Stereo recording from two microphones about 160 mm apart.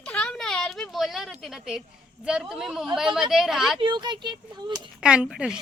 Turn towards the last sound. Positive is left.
turn(degrees=-5)  # may be behind; listen again after turning